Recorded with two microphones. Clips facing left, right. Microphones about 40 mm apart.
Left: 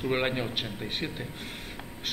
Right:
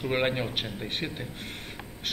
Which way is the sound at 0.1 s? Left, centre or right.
Centre.